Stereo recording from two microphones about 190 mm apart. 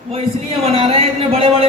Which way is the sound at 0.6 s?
30° right (ahead or behind).